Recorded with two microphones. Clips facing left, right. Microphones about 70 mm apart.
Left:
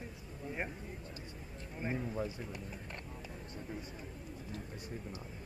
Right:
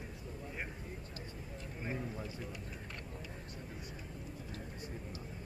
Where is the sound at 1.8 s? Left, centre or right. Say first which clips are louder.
Left 5 dB; left.